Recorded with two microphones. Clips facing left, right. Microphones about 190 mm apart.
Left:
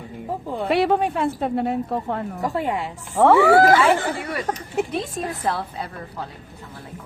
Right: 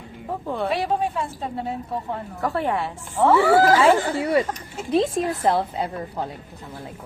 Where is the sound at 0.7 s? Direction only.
65° left (ahead or behind).